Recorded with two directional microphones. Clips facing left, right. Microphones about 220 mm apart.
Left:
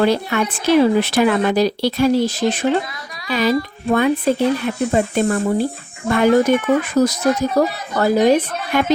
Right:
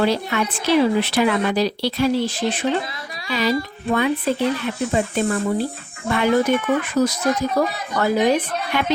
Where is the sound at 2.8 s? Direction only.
25° right (ahead or behind).